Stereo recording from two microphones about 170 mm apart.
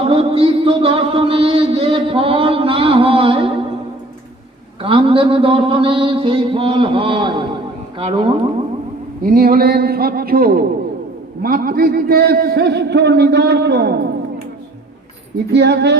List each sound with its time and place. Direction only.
0.0 s music: 35° right (ahead or behind)
4.8 s mantra: 30° right (ahead or behind)
9.2 s a man's voice: 60° right (ahead or behind); by 13.9 s 75° right (ahead or behind)
15.5 s music: 85° right